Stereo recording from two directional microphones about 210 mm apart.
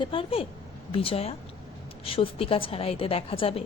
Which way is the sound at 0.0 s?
25° left (ahead or behind).